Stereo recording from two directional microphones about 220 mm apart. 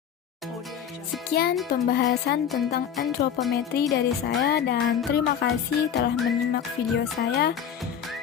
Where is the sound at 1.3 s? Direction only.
45° left (ahead or behind).